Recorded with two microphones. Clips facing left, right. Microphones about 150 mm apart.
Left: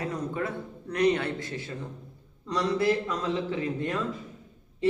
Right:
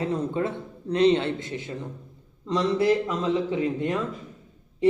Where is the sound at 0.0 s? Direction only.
25° right (ahead or behind).